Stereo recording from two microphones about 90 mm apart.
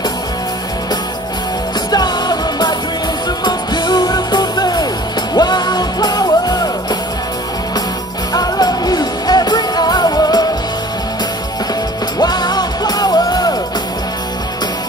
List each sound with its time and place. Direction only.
1.9 s music: 50° left (ahead or behind)
8.3 s music: 50° left (ahead or behind)
12.2 s music: 50° left (ahead or behind)